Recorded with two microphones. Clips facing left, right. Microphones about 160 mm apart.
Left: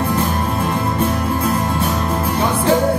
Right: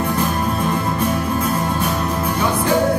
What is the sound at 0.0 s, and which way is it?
Music, 30° left (ahead or behind).